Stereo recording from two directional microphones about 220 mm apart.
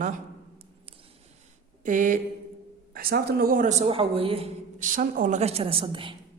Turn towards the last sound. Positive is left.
turn(degrees=-25)  # may be behind; listen again after turning